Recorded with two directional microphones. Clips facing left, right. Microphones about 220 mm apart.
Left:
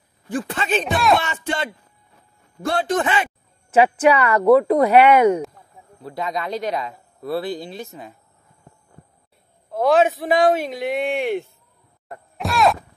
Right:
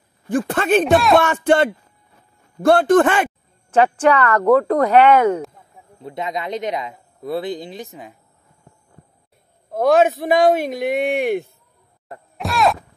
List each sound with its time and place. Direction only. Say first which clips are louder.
0.3 s a man's voice: right 6 dB; 50° right (ahead or behind)
0.8 s speech: right 3 dB; centre (ahead or behind)
1.2 s a man's voice: right 10 dB; 55° right (ahead or behind)
3.7 s speech: even; 5° left (ahead or behind)
5.9 s speech: right 1 dB; 20° right (ahead or behind)
9.7 s a man's voice: right 2 dB; 45° right (ahead or behind)
12.4 s a sound: even; centre (ahead or behind)